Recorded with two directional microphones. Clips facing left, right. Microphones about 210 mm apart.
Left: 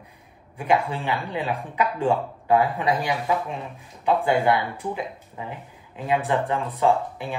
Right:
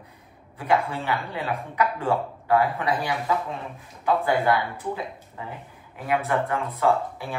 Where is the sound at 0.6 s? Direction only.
15° left (ahead or behind).